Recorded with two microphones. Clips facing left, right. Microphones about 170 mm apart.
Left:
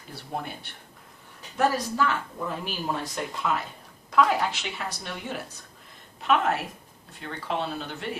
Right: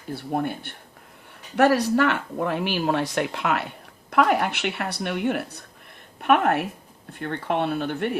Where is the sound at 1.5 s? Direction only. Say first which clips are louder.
Right 7 dB; 70° right (ahead or behind).